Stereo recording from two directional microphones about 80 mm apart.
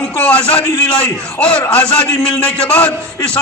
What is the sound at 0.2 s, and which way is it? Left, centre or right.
A man's voice, centre.